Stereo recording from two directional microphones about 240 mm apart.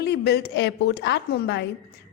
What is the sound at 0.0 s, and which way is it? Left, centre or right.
A woman's voice, left.